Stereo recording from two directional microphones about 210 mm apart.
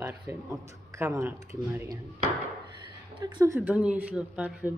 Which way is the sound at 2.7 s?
20° right (ahead or behind).